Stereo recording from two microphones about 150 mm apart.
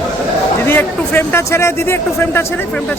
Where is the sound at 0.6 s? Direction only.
15° left (ahead or behind).